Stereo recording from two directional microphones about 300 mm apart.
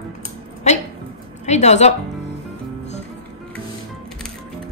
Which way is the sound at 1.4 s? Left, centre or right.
Left.